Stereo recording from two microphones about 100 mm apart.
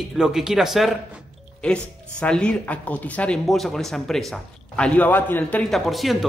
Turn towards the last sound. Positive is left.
turn(degrees=0)  # may be behind; listen again after turning